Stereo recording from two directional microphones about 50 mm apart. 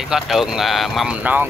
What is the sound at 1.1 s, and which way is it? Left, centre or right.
Speech, right.